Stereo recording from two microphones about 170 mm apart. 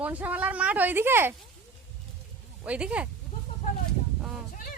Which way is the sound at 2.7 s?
5° right (ahead or behind).